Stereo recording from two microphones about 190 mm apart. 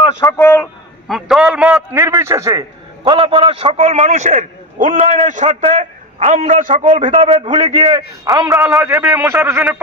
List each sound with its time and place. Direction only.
0.3 s a man's voice: 10° left (ahead or behind)
1.0 s a man's voice: centre (ahead or behind); by 6.9 s 45° right (ahead or behind)
6.9 s a man's voice: 30° right (ahead or behind)
8.6 s speech: 5° right (ahead or behind)